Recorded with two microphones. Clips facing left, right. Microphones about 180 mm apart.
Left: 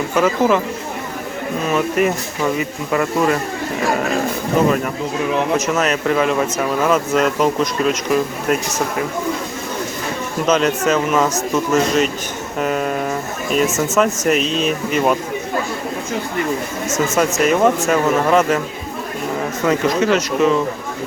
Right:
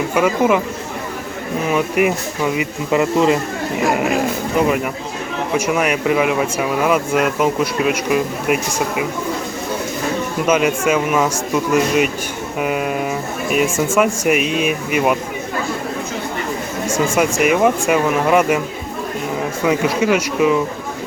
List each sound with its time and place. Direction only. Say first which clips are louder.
0.1 s speech: even; 10° right (ahead or behind)
1.7 s speech: right 1 dB; 10° right (ahead or behind)
5.5 s speech: right 1 dB; 10° right (ahead or behind)
10.4 s speech: even; 10° right (ahead or behind)
16.9 s speech: right 1 dB; 10° right (ahead or behind)
19.6 s speech: even; 10° right (ahead or behind)